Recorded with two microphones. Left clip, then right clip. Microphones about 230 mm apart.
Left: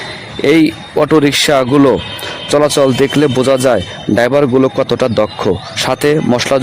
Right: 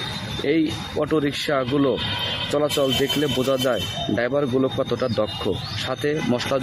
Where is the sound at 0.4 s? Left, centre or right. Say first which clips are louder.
Left 12 dB; left.